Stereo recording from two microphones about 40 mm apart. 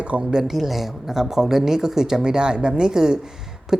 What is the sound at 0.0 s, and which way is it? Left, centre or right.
Speech, right.